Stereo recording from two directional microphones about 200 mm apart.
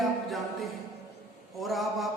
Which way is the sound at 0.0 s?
Centre (ahead or behind).